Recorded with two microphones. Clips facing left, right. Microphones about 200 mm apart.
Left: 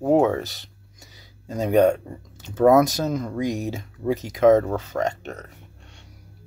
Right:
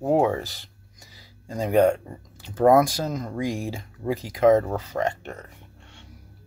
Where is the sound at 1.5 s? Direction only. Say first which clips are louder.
Left 2 dB; 25° left (ahead or behind).